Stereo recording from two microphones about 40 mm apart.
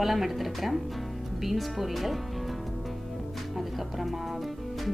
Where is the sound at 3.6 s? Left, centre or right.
Centre.